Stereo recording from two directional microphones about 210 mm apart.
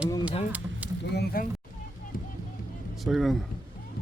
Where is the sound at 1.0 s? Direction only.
50° left (ahead or behind).